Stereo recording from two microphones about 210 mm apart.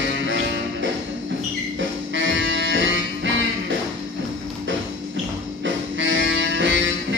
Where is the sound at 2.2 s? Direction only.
60° right (ahead or behind).